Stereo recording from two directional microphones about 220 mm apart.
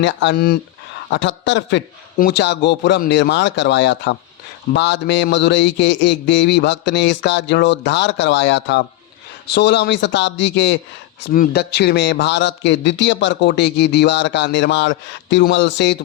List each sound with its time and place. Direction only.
0.0 s a man's voice: 55° left (ahead or behind)
11.2 s a man's voice: 45° left (ahead or behind)